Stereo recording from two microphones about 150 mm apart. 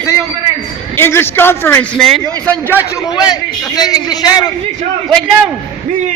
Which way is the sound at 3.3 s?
25° left (ahead or behind).